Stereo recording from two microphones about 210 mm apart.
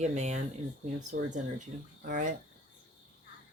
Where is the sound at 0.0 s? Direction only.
35° right (ahead or behind).